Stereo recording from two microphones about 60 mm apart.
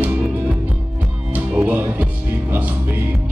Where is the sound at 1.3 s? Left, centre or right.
Right.